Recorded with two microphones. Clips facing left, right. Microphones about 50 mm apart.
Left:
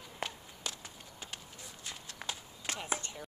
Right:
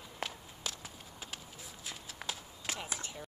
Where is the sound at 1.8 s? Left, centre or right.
Centre.